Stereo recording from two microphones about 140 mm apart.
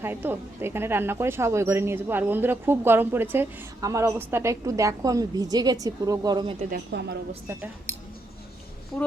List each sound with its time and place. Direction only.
0.0 s speech: 15° right (ahead or behind)